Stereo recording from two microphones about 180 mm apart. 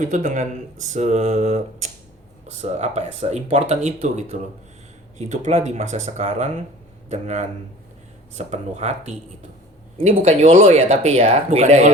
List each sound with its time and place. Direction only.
0.0 s speech: 45° right (ahead or behind)